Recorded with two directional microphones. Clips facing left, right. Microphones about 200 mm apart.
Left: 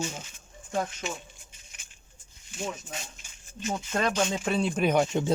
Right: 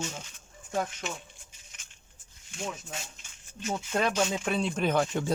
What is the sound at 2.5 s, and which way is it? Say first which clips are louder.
Speech: left 2 dB; 5° left (ahead or behind).